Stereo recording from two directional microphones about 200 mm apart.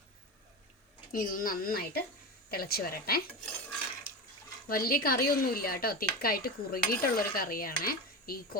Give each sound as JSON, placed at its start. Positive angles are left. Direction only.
{"t": 1.1, "sound": "speech", "side_deg": 45}
{"t": 4.7, "sound": "speech", "side_deg": 45}